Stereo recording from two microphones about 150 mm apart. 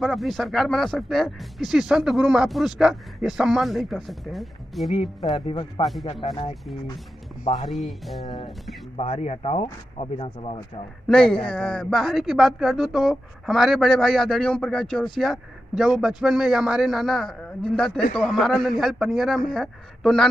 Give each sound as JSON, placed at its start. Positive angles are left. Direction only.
{"t": 0.0, "sound": "speech", "side_deg": 0}
{"t": 5.3, "sound": "speech", "side_deg": 30}
{"t": 7.7, "sound": "speech", "side_deg": 0}
{"t": 8.9, "sound": "speech", "side_deg": 45}
{"t": 11.1, "sound": "speech", "side_deg": 5}